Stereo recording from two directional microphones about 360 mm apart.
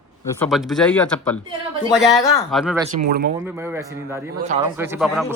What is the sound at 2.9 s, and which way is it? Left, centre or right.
Speech, right.